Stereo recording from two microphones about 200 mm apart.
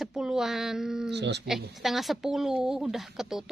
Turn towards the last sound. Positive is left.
turn(degrees=0)  # may be behind; listen again after turning